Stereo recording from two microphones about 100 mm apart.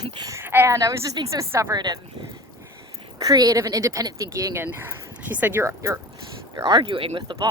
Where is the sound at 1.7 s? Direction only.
45° right (ahead or behind).